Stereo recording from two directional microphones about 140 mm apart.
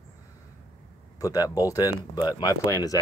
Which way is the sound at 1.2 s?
25° left (ahead or behind).